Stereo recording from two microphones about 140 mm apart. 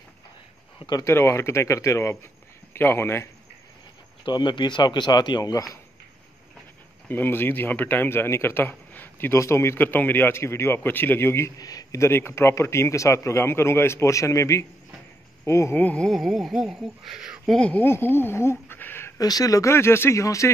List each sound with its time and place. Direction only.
0.8 s a man's voice: 25° left (ahead or behind)
4.3 s speech: 35° left (ahead or behind)
7.1 s a man's voice: 15° left (ahead or behind)
16.1 s speech: centre (ahead or behind)
17.6 s speech: 10° left (ahead or behind)